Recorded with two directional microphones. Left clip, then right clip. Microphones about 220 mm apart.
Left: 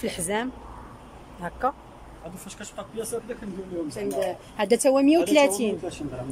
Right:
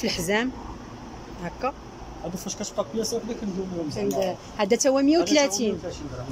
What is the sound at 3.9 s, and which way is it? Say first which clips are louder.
Speech: right 2 dB; centre (ahead or behind).